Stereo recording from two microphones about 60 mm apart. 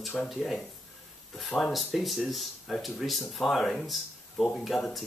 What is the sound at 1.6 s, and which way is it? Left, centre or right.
Speech, centre.